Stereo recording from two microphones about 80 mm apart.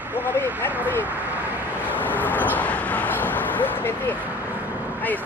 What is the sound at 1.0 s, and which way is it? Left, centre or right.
Speech, right.